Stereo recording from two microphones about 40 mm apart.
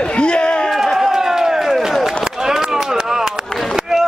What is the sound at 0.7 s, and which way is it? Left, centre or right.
Run, centre.